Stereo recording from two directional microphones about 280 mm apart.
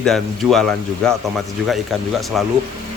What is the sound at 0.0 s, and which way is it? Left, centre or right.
Speech, centre.